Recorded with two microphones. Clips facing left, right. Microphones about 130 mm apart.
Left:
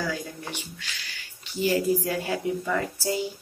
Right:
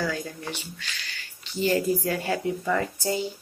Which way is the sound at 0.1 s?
15° left (ahead or behind).